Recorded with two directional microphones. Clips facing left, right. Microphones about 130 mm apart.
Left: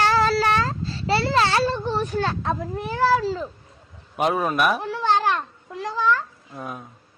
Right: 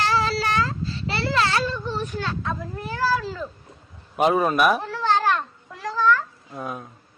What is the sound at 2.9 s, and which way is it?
Speech, 25° left (ahead or behind).